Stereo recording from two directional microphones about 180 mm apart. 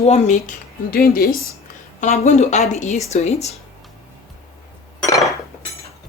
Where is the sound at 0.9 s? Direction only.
55° left (ahead or behind).